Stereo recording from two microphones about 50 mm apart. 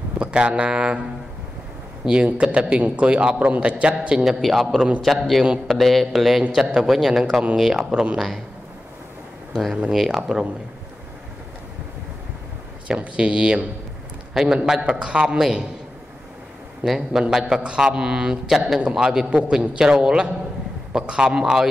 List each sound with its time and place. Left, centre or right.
0.2 s speech: centre
2.0 s a man's voice: right
4.2 s a man's voice: centre
6.5 s a man's voice: centre
7.9 s a man's voice: right
9.5 s a man's voice: centre
12.8 s a man's voice: right
16.8 s a man's voice: centre